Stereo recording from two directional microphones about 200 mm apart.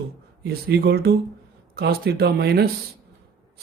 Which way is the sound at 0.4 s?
55° right (ahead or behind).